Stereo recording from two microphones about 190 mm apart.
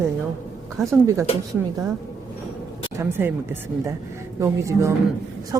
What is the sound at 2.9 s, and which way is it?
Speech, 15° right (ahead or behind).